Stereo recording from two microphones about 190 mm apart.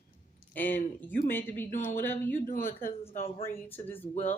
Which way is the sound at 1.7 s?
45° left (ahead or behind).